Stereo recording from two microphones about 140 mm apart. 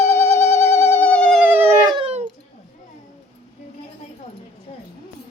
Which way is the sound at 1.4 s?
15° right (ahead or behind).